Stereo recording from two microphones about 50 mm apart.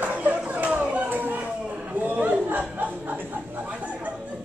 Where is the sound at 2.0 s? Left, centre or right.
Right.